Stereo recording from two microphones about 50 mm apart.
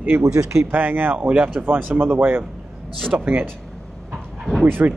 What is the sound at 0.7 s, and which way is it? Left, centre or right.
Speech, right.